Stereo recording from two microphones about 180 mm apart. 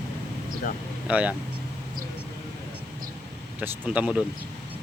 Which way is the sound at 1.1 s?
10° right (ahead or behind).